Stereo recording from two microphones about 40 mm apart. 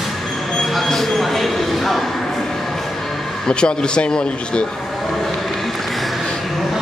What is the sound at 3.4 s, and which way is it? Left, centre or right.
Speech, left.